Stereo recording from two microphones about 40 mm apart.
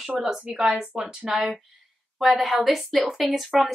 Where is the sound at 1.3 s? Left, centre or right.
Centre.